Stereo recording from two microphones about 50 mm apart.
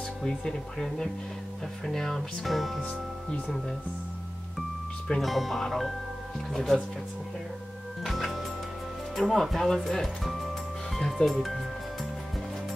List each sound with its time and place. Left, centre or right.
0.2 s speech: centre
2.8 s speech: left
4.6 s speech: centre
8.0 s music: centre
9.1 s speech: centre
11.4 s music: centre